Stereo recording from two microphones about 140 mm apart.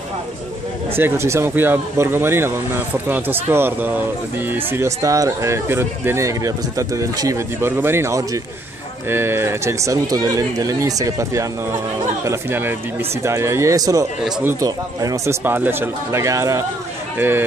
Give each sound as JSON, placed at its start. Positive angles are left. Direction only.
{"t": 0.9, "sound": "speech", "side_deg": -15}